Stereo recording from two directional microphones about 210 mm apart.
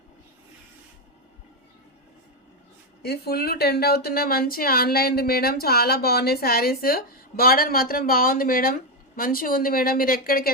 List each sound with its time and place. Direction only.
3.0 s speech: 50° left (ahead or behind)